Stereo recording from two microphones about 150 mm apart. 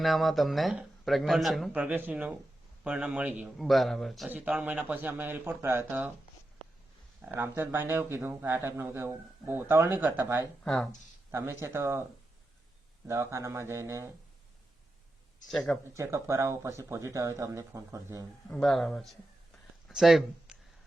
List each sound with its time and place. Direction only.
0.0 s speech: centre (ahead or behind)
7.2 s speech: 15° right (ahead or behind)
10.6 s speech: centre (ahead or behind)
11.3 s speech: 15° right (ahead or behind)
13.1 s speech: 20° right (ahead or behind)
15.4 s speech: 5° left (ahead or behind)
15.8 s speech: 20° right (ahead or behind)
18.4 s speech: 5° left (ahead or behind)